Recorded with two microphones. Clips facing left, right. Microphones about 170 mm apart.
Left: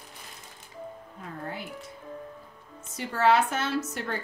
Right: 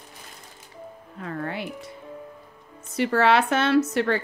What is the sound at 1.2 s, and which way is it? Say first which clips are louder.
Speech: right 7 dB; 75° right (ahead or behind).